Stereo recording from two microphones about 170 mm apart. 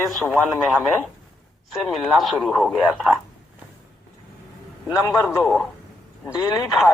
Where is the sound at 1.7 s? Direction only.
Centre (ahead or behind).